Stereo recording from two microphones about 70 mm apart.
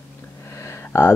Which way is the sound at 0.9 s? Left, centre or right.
Left.